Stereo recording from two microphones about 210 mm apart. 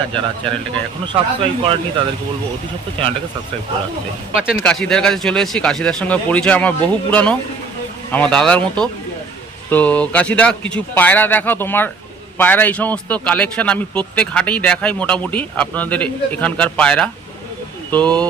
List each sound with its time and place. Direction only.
1.0 s speech: 25° right (ahead or behind)
4.4 s speech: centre (ahead or behind)